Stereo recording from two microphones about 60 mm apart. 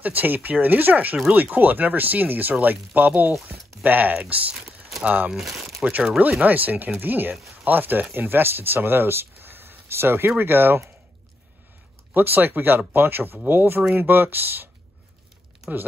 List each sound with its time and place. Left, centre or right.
0.0 s speech: right
4.6 s a sound: centre
5.0 s speech: right
5.3 s speech: centre
6.4 s speech: right
12.1 s speech: right